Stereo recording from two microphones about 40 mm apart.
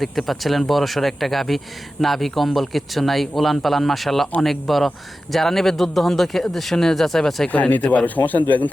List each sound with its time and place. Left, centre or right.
0.0 s speech: centre
7.5 s a man's voice: left